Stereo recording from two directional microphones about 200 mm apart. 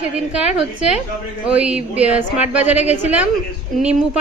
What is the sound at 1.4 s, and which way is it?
A woman's voice, 5° right (ahead or behind).